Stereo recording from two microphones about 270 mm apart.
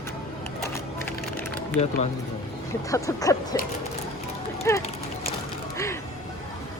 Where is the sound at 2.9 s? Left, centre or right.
Centre.